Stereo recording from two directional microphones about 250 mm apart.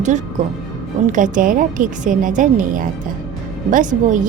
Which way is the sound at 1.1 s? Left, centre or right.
Right.